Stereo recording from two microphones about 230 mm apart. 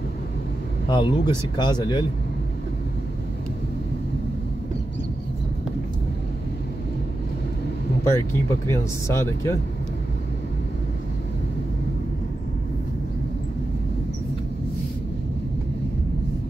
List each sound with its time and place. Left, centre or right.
0.8 s speech: left
8.0 s speech: centre